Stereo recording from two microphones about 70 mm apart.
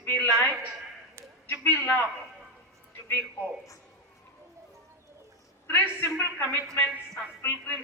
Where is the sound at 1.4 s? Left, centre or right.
Left.